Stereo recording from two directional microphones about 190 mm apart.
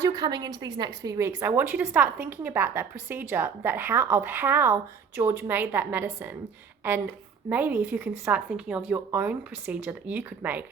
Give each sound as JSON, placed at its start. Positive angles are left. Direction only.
{"t": 0.0, "sound": "a woman's voice", "side_deg": -20}
{"t": 7.5, "sound": "a woman's voice", "side_deg": -10}